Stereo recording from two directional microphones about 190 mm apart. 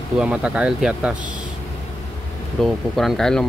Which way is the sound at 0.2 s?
5° right (ahead or behind).